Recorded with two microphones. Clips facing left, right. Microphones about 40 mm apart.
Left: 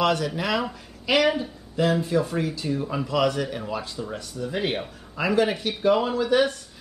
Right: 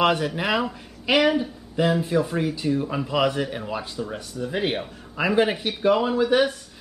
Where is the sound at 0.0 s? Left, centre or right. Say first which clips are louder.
Right 2 dB; right.